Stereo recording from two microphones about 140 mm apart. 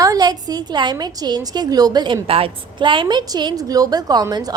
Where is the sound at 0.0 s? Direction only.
25° right (ahead or behind).